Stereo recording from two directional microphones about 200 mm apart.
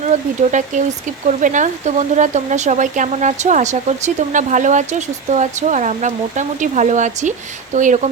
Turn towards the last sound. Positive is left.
turn(degrees=-40)  # may be behind; listen again after turning